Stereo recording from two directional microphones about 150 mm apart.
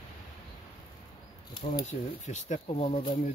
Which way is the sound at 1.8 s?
50° left (ahead or behind).